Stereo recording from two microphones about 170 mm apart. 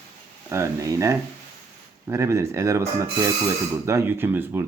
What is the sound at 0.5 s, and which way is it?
Speech, 20° right (ahead or behind).